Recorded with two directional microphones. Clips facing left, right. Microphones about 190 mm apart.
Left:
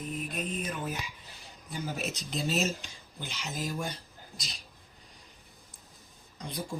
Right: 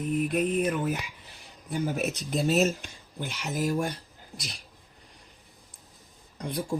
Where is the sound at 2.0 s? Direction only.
55° right (ahead or behind).